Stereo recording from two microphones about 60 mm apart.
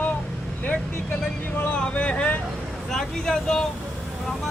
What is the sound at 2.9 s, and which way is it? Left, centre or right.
Speech, centre.